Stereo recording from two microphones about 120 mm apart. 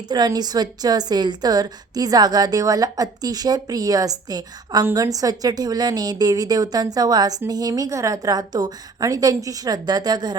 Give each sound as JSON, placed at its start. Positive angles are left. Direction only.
{"t": 0.1, "sound": "a woman's voice", "side_deg": -35}